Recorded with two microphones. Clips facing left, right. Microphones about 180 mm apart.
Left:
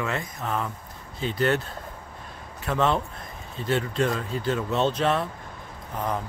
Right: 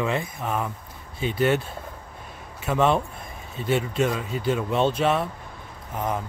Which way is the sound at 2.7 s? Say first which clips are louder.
Right 3 dB; 10° right (ahead or behind).